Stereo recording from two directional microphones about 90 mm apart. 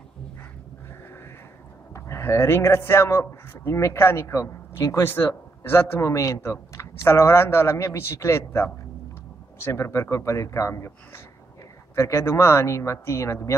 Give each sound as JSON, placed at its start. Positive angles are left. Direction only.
{"t": 2.0, "sound": "speech", "side_deg": 30}